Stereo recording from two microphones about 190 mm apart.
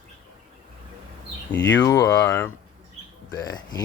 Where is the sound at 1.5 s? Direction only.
75° left (ahead or behind).